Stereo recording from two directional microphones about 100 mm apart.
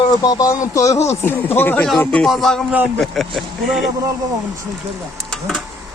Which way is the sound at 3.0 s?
Centre (ahead or behind).